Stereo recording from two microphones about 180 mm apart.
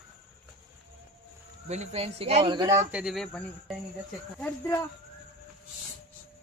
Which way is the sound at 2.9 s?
5° right (ahead or behind).